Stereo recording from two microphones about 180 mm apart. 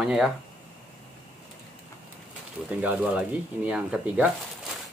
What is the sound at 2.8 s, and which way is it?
Speech, 10° right (ahead or behind).